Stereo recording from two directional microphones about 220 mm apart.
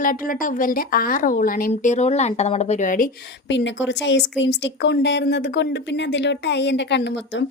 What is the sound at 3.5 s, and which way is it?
A woman's voice, 55° left (ahead or behind).